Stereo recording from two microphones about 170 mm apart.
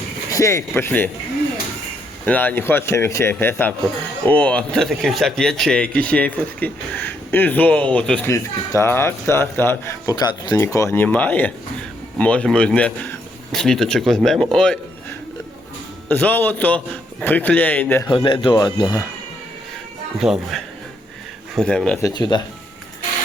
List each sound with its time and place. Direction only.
0.3 s speech: 20° left (ahead or behind)
2.2 s speech: 10° left (ahead or behind)
16.0 s speech: 10° left (ahead or behind)
18.1 s speech: 30° left (ahead or behind)
20.1 s speech: 5° right (ahead or behind)
22.0 s speech: 25° left (ahead or behind)